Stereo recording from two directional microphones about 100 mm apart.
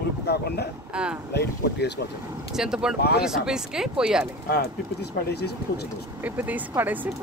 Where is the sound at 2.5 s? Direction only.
5° right (ahead or behind).